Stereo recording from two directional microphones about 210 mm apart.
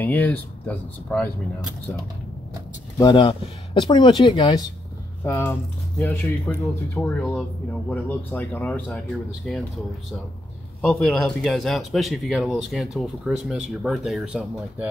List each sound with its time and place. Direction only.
0.0 s speech: 10° left (ahead or behind)
3.0 s speech: 20° left (ahead or behind); by 9.6 s 5° left (ahead or behind)
10.8 s speech: 5° left (ahead or behind)